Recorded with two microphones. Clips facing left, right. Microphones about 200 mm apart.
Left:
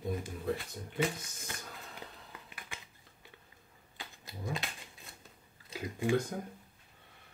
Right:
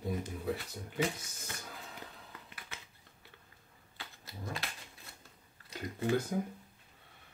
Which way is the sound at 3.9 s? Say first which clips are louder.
Left 2 dB; 15° left (ahead or behind).